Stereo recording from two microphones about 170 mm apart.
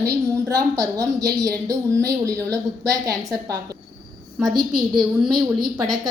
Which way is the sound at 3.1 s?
Centre (ahead or behind).